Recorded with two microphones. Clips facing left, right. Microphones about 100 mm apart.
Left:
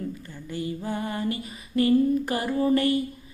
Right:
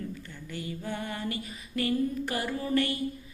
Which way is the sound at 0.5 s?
35° left (ahead or behind).